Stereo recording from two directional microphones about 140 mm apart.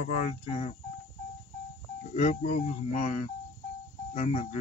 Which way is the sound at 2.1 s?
55° left (ahead or behind).